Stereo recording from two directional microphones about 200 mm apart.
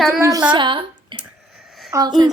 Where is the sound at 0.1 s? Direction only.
15° right (ahead or behind).